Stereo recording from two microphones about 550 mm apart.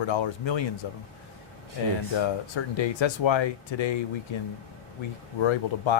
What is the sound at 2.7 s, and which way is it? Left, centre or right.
Speech, left.